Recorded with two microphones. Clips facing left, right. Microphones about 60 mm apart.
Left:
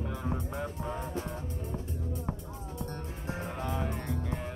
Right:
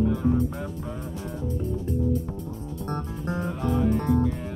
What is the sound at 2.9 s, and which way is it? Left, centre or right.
Music, right.